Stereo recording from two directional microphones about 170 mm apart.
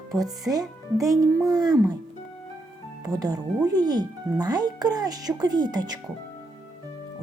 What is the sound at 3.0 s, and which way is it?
Speech, 20° right (ahead or behind).